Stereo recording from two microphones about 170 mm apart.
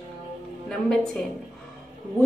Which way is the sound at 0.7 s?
5° left (ahead or behind).